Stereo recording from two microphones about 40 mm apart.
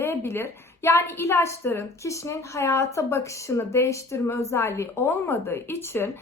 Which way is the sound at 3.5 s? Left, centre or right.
Left.